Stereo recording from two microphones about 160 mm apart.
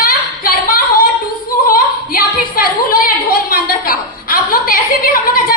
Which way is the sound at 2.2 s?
60° left (ahead or behind).